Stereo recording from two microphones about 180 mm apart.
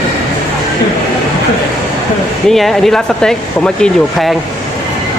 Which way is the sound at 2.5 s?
Centre (ahead or behind).